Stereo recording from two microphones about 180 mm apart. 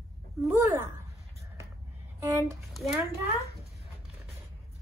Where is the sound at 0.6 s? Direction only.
10° right (ahead or behind).